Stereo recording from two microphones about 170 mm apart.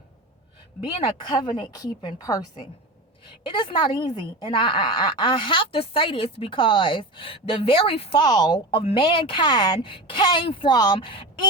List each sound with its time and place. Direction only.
0.8 s a woman's voice: 30° left (ahead or behind)